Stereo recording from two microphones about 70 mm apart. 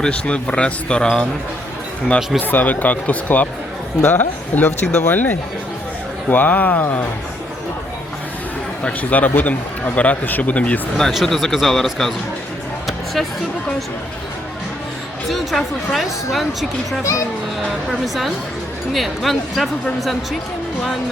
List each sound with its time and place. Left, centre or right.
0.0 s speech: centre
1.0 s a woman's voice: centre
2.4 s speech: left
5.1 s speech: left
8.8 s speech: left
11.1 s a woman's voice: centre
15.3 s a woman's voice: centre
17.0 s speech: left
18.0 s a woman's voice: centre